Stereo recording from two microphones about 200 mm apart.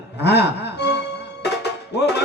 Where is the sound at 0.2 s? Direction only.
55° left (ahead or behind).